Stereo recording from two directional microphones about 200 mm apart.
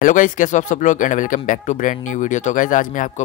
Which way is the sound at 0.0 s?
40° left (ahead or behind).